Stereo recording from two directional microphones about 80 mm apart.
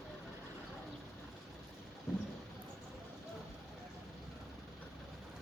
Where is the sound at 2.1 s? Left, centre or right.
Centre.